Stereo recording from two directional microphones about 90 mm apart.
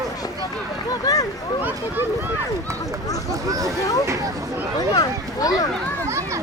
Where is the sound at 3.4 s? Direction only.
40° right (ahead or behind).